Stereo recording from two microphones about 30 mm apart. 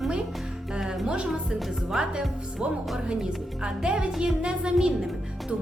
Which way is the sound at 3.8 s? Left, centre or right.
Right.